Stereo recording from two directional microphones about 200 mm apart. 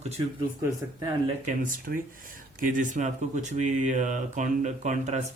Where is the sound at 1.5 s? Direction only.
45° right (ahead or behind).